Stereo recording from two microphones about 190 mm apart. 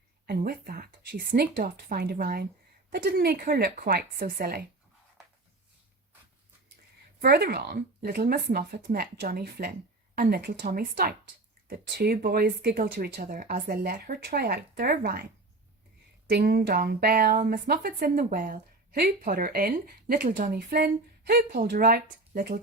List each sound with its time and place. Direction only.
0.3 s a woman's voice: 50° right (ahead or behind)
7.2 s a woman's voice: 55° right (ahead or behind)
16.3 s a woman's voice: 55° right (ahead or behind)